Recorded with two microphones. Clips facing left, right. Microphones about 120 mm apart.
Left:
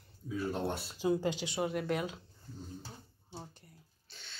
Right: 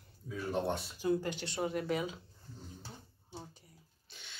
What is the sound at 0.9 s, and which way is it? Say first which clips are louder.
Speech: left 3 dB; 20° left (ahead or behind).